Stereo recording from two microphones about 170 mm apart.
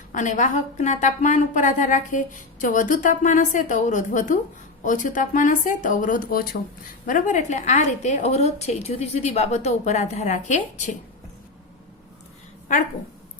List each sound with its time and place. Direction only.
0.1 s speech: 45° left (ahead or behind)